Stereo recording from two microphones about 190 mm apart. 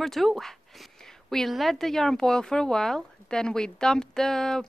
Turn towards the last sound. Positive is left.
turn(degrees=5)  # may be behind; listen again after turning